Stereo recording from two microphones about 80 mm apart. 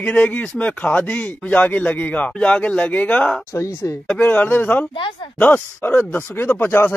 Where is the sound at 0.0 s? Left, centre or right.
Centre.